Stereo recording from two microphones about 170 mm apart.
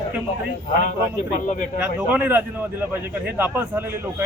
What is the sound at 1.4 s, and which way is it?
Speech, 50° left (ahead or behind).